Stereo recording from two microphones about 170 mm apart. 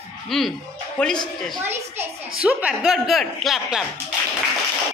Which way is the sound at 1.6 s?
15° right (ahead or behind).